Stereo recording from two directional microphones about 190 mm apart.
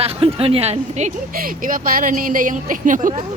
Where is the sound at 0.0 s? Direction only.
30° right (ahead or behind).